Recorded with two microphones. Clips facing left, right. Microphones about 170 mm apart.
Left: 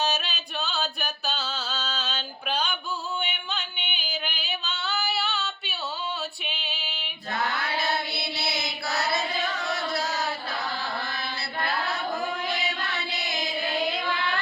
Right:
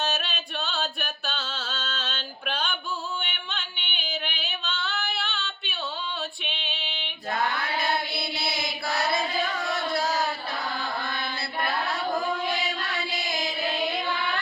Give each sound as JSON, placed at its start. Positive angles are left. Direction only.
{"t": 0.0, "sound": "music", "side_deg": 0}
{"t": 3.2, "sound": "singing", "side_deg": 0}
{"t": 6.4, "sound": "female singing", "side_deg": 5}
{"t": 8.4, "sound": "mantra", "side_deg": -50}
{"t": 9.9, "sound": "a sound", "side_deg": -50}